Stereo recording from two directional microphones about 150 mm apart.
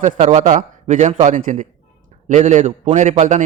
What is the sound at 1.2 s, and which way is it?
A man's voice, 60° right (ahead or behind).